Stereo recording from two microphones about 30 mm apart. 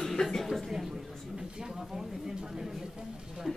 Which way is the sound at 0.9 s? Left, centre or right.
Right.